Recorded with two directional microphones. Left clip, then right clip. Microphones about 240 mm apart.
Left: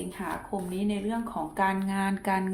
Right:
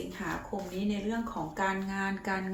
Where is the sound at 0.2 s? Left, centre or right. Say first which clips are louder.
Left 2 dB; left.